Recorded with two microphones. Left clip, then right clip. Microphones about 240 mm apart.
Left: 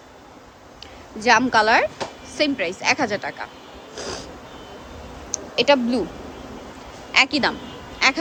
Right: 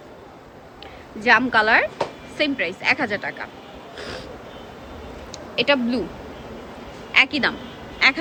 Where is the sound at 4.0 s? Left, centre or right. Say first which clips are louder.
Left 2 dB; centre.